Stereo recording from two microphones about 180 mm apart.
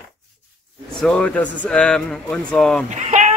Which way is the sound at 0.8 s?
5° left (ahead or behind).